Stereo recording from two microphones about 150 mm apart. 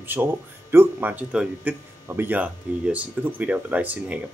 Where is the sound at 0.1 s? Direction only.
15° right (ahead or behind).